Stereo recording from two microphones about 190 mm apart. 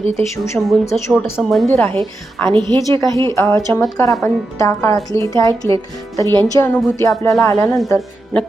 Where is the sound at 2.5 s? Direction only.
20° right (ahead or behind).